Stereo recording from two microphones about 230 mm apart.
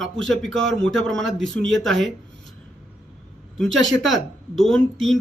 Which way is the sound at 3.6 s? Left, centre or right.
Right.